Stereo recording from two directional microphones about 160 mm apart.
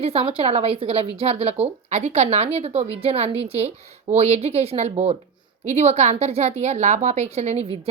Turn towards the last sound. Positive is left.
turn(degrees=-40)  # may be behind; listen again after turning